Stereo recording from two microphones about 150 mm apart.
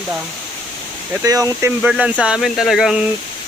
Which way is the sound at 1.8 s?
10° right (ahead or behind).